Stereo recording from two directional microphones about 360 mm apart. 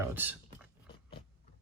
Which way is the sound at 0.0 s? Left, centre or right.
Centre.